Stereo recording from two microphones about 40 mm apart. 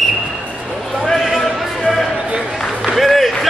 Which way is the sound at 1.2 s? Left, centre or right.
Centre.